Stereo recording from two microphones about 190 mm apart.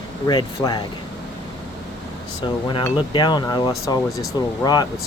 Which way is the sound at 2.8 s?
25° left (ahead or behind).